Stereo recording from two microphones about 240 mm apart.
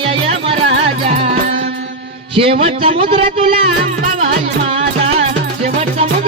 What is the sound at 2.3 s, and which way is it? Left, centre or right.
A man's voice, right.